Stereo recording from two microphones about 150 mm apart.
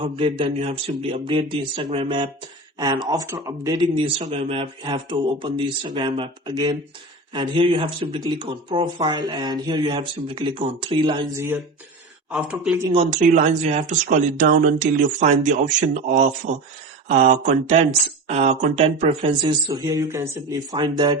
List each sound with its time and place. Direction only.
0.0 s speech: 35° right (ahead or behind)
4.3 s speech: 40° right (ahead or behind)
12.3 s speech: 5° right (ahead or behind)
13.1 s speech: 55° right (ahead or behind)
19.4 s speech: 25° right (ahead or behind)